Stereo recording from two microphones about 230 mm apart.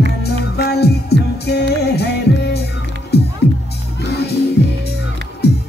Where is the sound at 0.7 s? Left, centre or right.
Left.